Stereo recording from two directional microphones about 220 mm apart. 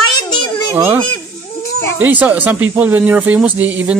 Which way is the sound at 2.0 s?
5° right (ahead or behind).